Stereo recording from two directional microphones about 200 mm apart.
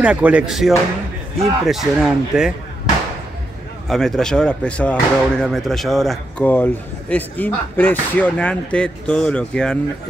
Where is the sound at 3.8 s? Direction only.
Centre (ahead or behind).